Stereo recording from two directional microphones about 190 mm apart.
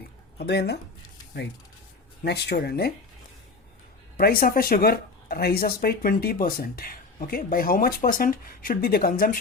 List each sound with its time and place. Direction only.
0.3 s speech: 60° left (ahead or behind)
2.2 s speech: 60° left (ahead or behind)
4.2 s speech: 50° left (ahead or behind)